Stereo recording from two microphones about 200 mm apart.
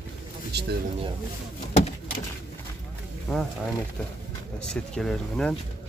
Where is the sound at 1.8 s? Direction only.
35° left (ahead or behind).